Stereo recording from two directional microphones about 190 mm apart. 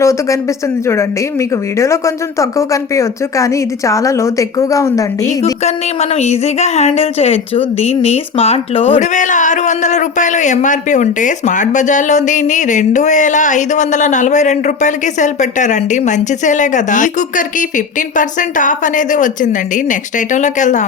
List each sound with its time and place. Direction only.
0.0 s speech: 15° left (ahead or behind)
5.6 s speech: 35° left (ahead or behind)